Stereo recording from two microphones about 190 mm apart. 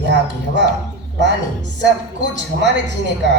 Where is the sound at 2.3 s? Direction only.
65° right (ahead or behind).